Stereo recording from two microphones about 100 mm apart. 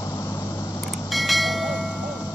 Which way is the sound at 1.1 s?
Centre (ahead or behind).